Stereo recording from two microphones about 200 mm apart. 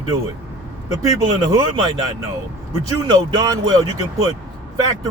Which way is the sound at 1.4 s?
20° right (ahead or behind).